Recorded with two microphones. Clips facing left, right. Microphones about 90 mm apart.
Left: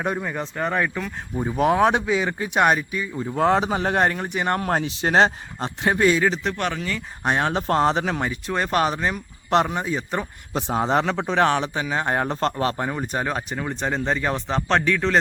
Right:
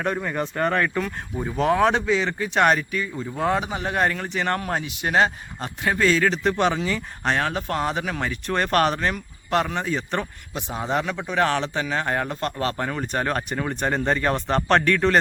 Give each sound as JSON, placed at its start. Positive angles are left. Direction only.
{"t": 0.0, "sound": "speech", "side_deg": 5}
{"t": 3.3, "sound": "a man's voice", "side_deg": 30}
{"t": 4.3, "sound": "speech", "side_deg": 15}
{"t": 4.5, "sound": "a man's voice", "side_deg": 35}
{"t": 6.3, "sound": "speech", "side_deg": -10}
{"t": 7.3, "sound": "a man's voice", "side_deg": 25}
{"t": 8.3, "sound": "speech", "side_deg": 5}
{"t": 9.5, "sound": "a man's voice", "side_deg": 20}
{"t": 9.8, "sound": "speech", "side_deg": 5}
{"t": 10.5, "sound": "a man's voice", "side_deg": 35}
{"t": 12.7, "sound": "speech", "side_deg": 15}
{"t": 13.0, "sound": "speech", "side_deg": 5}